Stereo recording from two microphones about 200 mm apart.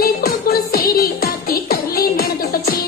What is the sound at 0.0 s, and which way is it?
Music, 50° left (ahead or behind).